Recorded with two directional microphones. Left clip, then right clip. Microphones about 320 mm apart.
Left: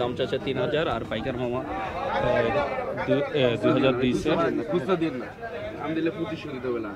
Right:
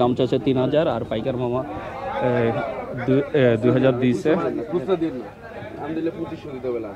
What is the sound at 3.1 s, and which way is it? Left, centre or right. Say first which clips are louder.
Speech: right 6 dB; right.